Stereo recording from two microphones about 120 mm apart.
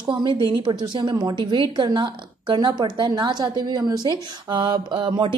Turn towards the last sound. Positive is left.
turn(degrees=-45)  # may be behind; listen again after turning